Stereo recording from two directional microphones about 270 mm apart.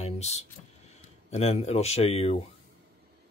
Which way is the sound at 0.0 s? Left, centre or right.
Left.